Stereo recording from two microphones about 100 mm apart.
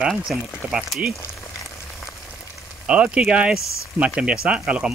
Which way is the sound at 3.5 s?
30° left (ahead or behind).